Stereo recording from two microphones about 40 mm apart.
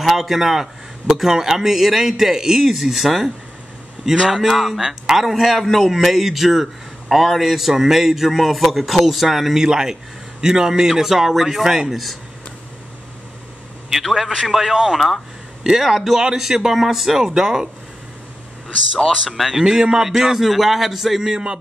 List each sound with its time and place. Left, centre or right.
0.0 s a man's voice: centre
14.0 s a man's voice: centre
19.0 s a man's voice: centre
19.5 s a man's voice: centre
21.3 s music: right